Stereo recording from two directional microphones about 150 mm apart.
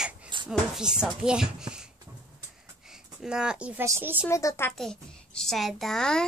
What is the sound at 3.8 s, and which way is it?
Speech, 15° right (ahead or behind).